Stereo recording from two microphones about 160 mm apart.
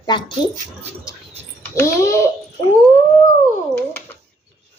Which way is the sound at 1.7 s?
20° left (ahead or behind).